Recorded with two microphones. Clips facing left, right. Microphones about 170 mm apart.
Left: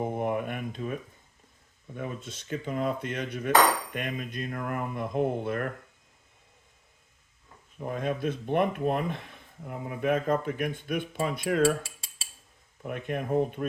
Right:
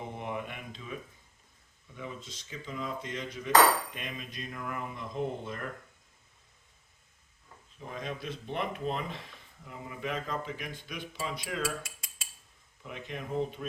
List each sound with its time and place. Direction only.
0.0 s a sound: 50° left (ahead or behind)
2.0 s speech: 60° left (ahead or behind)
7.8 s speech: 55° left (ahead or behind)
11.6 s cutlery: 30° left (ahead or behind)
12.8 s speech: 55° left (ahead or behind)